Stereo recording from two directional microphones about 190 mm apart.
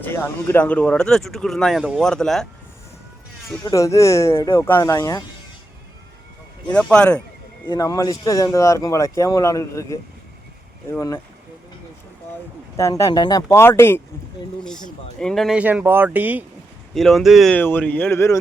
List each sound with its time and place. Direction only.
0.0 s speech: 10° left (ahead or behind)
3.5 s speech: 15° left (ahead or behind)
6.7 s speech: 5° left (ahead or behind)
7.7 s speech: 20° left (ahead or behind)
12.7 s speech: 15° left (ahead or behind)
15.2 s speech: centre (ahead or behind)